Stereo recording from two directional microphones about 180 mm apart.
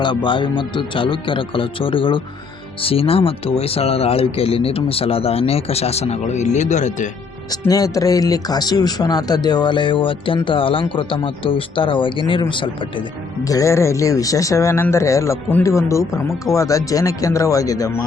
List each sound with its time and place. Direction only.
0.0 s speech: 25° left (ahead or behind)
7.5 s speech: 20° left (ahead or behind)